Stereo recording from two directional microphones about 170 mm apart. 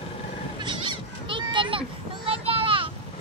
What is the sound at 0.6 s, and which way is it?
Children playing, 30° right (ahead or behind).